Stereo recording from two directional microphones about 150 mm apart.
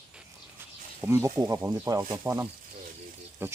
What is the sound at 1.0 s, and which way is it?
Speech, 15° right (ahead or behind).